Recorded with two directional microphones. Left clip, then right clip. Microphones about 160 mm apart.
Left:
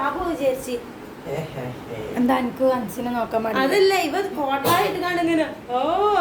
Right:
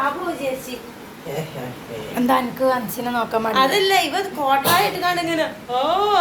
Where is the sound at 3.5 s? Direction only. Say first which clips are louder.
Right 2 dB; 45° left (ahead or behind).